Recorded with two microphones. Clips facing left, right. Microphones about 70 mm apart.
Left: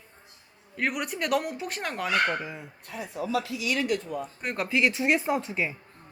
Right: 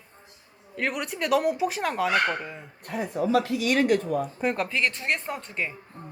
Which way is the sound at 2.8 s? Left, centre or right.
Right.